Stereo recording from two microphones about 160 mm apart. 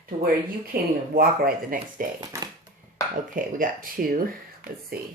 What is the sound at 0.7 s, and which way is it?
Speech, 70° right (ahead or behind).